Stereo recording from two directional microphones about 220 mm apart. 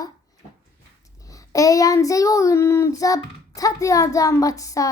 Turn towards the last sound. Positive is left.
turn(degrees=15)  # may be behind; listen again after turning